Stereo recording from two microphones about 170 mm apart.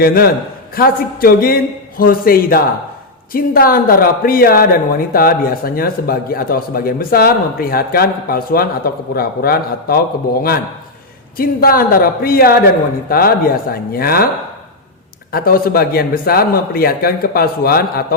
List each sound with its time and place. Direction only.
0.0 s speech: 60° left (ahead or behind)
11.3 s speech: 60° left (ahead or behind)
15.3 s speech: 60° left (ahead or behind)